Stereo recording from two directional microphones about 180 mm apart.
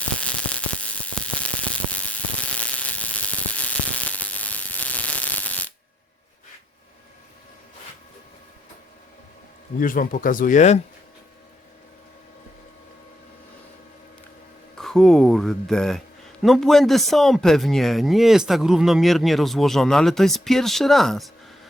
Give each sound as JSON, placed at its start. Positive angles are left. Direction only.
{"t": 0.2, "sound": "a sound", "side_deg": 5}
{"t": 9.8, "sound": "speech", "side_deg": 50}
{"t": 14.8, "sound": "speech", "side_deg": 0}